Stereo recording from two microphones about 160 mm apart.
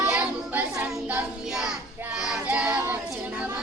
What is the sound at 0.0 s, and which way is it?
Child singing, 10° right (ahead or behind).